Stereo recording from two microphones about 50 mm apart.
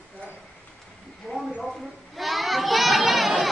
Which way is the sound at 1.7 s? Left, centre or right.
Centre.